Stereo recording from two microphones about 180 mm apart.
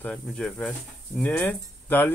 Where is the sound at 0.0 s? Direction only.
5° left (ahead or behind).